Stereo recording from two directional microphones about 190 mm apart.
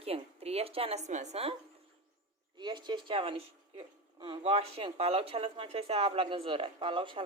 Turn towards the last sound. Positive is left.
turn(degrees=-25)  # may be behind; listen again after turning